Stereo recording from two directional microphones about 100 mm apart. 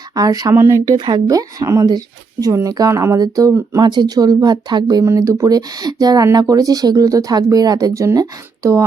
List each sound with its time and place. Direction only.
0.2 s speech: 40° right (ahead or behind)
0.5 s speech: 25° right (ahead or behind)
0.9 s speech: 45° right (ahead or behind)
5.0 s speech: 30° right (ahead or behind)